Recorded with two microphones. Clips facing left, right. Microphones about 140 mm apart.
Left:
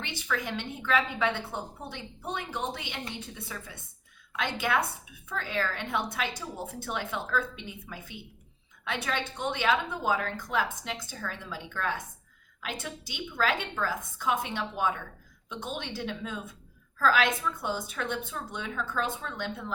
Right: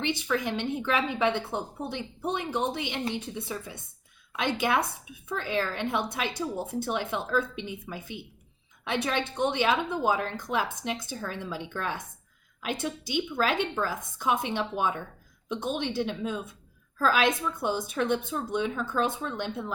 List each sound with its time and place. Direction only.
0.0 s a woman's voice: 20° right (ahead or behind)